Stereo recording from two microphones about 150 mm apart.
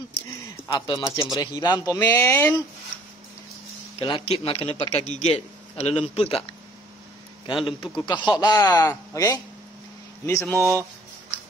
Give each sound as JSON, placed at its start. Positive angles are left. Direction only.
{"t": 0.7, "sound": "speech", "side_deg": 30}
{"t": 4.0, "sound": "a man's voice", "side_deg": 40}
{"t": 10.6, "sound": "speech", "side_deg": -20}